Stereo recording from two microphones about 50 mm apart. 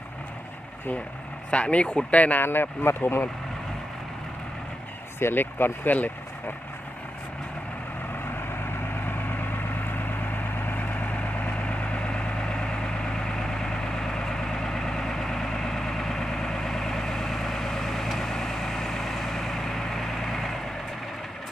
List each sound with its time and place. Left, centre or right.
1.5 s speech: left
2.4 s speech: left
5.2 s speech: left
9.0 s vehicle: left
10.7 s vehicle: left; by 20.6 s centre